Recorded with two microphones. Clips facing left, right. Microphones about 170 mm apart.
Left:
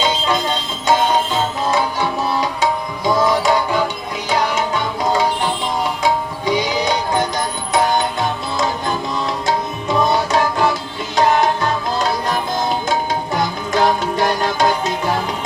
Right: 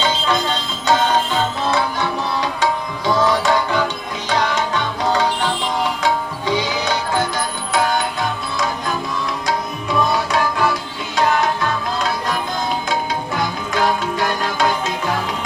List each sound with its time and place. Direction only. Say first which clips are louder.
0.0 s music: left 1 dB; 10° left (ahead or behind)
1.7 s tabla: left 1 dB; 10° left (ahead or behind)
4.3 s music: left 1 dB; 10° left (ahead or behind)
9.5 s music: left 2 dB; 25° left (ahead or behind)
13.3 s music: left 4 dB; 35° left (ahead or behind)